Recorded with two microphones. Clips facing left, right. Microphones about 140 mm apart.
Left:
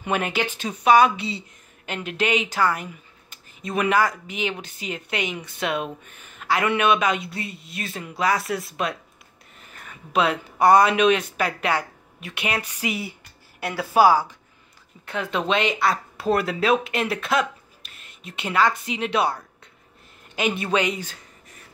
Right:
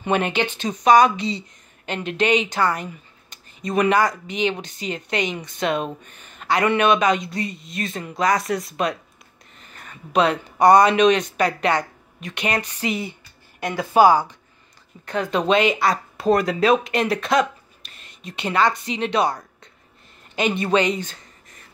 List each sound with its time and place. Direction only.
0.0 s speech: 5° left (ahead or behind)
20.3 s speech: 5° left (ahead or behind)